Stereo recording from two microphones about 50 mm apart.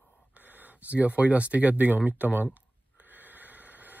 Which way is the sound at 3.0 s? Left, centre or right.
Right.